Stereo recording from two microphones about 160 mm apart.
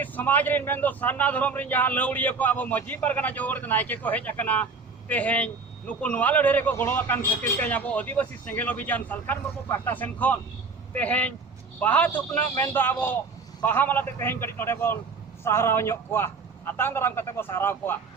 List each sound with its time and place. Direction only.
0.0 s a man's voice: 10° left (ahead or behind)